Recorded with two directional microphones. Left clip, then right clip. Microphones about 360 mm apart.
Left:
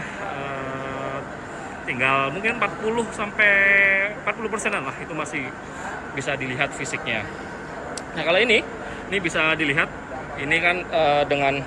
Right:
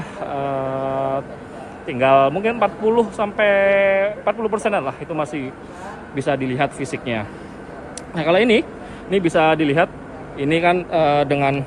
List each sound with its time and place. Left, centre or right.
0.3 s mantra: centre
1.9 s speech: centre